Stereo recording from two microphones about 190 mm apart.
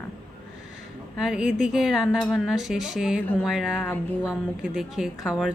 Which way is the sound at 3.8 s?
10° left (ahead or behind).